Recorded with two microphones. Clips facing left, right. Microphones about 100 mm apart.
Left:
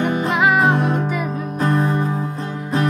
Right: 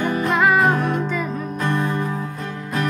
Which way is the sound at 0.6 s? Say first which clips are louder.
Left 1 dB; 25° left (ahead or behind).